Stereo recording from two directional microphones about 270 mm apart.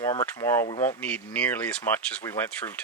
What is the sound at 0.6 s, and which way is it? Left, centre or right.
Speech, left.